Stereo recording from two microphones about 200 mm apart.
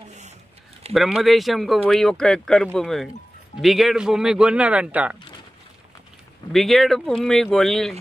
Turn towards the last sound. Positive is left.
turn(degrees=0)  # may be behind; listen again after turning